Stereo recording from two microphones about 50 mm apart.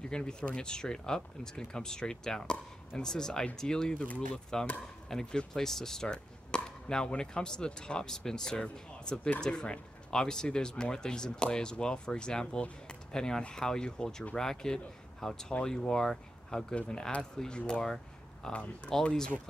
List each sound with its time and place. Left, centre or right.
0.1 s speech: centre
16.7 s speech: left